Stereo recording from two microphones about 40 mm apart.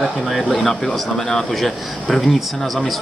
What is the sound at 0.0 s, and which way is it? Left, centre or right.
Speech, centre.